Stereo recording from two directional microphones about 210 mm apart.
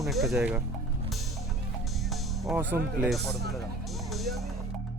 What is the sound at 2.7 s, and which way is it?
Speech, 10° right (ahead or behind).